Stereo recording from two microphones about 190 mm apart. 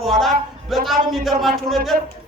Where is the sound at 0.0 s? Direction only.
Centre (ahead or behind).